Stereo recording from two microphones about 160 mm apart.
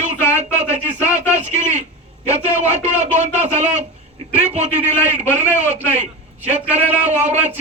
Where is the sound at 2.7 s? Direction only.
45° right (ahead or behind).